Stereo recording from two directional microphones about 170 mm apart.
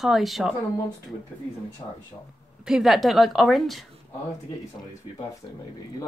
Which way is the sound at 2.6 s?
5° right (ahead or behind).